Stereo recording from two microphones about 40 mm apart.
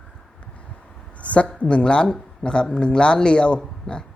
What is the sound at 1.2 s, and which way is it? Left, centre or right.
A woman's voice, left.